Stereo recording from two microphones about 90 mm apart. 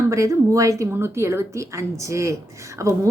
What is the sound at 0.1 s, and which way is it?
A woman's voice, 35° right (ahead or behind).